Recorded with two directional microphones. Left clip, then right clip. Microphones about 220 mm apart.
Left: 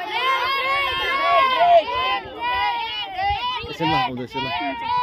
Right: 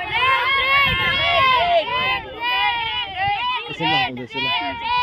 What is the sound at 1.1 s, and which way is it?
Run, 35° right (ahead or behind).